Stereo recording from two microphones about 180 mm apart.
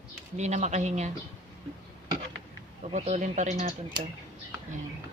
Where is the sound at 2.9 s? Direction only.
45° right (ahead or behind).